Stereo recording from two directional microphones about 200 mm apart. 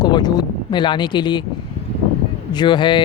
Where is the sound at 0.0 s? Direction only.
20° left (ahead or behind).